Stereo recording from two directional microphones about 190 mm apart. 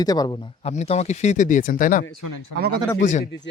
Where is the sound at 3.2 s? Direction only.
65° left (ahead or behind).